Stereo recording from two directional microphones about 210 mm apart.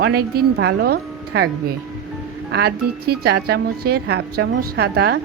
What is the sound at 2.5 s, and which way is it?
Speech, 50° right (ahead or behind).